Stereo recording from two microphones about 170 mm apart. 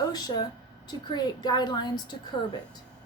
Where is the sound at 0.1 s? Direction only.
25° left (ahead or behind).